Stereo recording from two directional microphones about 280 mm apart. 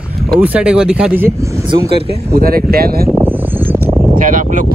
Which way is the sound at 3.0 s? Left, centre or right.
Centre.